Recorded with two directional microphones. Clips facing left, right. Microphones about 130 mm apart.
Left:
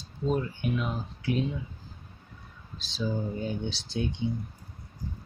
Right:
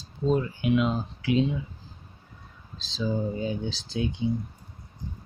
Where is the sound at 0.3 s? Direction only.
90° right.